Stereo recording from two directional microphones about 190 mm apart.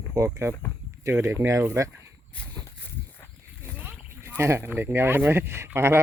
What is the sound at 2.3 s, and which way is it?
Walk, 10° left (ahead or behind).